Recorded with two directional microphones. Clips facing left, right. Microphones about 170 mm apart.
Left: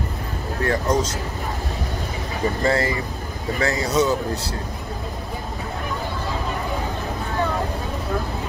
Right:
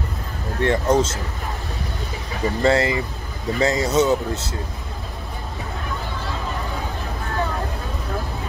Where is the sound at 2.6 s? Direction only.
25° right (ahead or behind).